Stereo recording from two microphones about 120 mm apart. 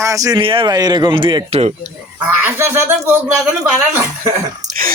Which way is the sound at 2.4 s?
20° right (ahead or behind).